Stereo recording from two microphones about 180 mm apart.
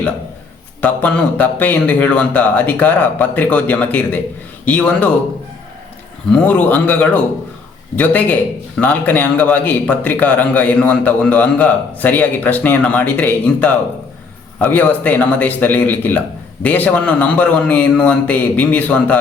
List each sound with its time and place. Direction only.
0.8 s a man's voice: 10° left (ahead or behind)
6.3 s a man's voice: 10° left (ahead or behind)